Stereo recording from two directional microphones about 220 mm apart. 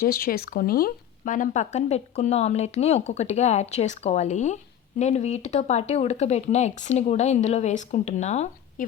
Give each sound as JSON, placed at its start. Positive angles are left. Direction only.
{"t": 0.0, "sound": "speech", "side_deg": 40}